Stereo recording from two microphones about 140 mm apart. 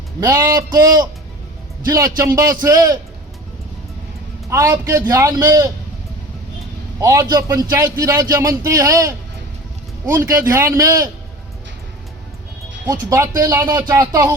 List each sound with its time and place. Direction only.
0.2 s a man's voice: 20° right (ahead or behind)
1.9 s a man's voice: 25° right (ahead or behind)
4.4 s a man's voice: 20° right (ahead or behind)
7.0 s a man's voice: 20° right (ahead or behind)
12.8 s a man's voice: 20° right (ahead or behind)